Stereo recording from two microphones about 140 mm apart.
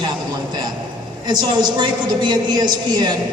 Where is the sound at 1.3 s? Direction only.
30° right (ahead or behind).